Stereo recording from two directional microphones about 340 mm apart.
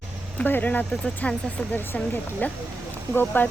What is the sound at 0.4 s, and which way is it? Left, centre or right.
Speech, centre.